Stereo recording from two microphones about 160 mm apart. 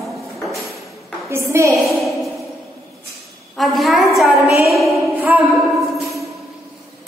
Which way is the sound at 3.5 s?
Centre (ahead or behind).